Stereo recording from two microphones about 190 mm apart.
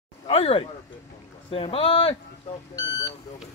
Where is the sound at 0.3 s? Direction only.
30° left (ahead or behind).